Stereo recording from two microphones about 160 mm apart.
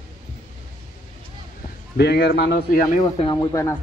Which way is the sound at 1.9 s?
90° left.